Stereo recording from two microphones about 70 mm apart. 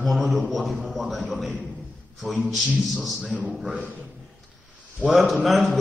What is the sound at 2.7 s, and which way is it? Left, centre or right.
Speech, centre.